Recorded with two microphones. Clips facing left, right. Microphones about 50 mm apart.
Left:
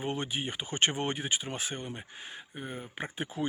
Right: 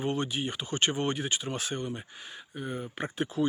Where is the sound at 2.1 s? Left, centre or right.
Left.